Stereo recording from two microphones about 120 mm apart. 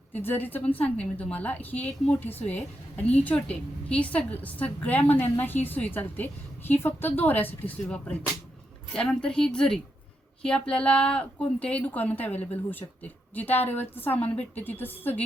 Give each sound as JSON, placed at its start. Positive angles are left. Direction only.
{"t": 0.1, "sound": "a woman's voice", "side_deg": 15}